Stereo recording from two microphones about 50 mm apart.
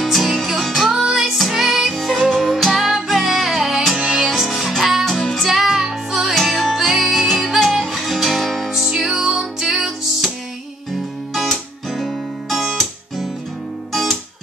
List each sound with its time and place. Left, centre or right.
0.0 s music: centre
5.0 s music: centre
5.5 s music: centre
6.3 s music: centre
11.3 s guitar: centre